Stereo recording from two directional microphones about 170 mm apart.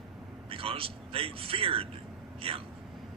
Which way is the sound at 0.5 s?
35° right (ahead or behind).